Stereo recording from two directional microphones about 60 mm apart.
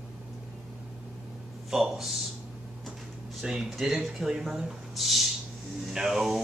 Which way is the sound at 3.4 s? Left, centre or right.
Centre.